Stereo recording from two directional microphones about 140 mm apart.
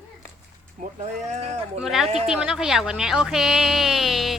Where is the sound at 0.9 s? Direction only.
55° right (ahead or behind).